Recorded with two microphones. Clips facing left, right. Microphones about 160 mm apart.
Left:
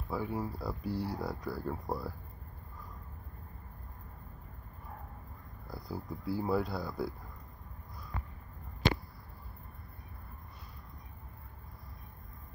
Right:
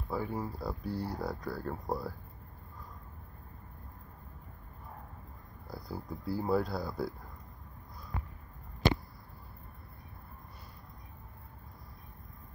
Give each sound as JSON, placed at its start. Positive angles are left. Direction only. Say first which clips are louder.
{"t": 0.1, "sound": "speech", "louder": "even", "side_deg": 5}
{"t": 5.7, "sound": "speech", "louder": "even", "side_deg": 0}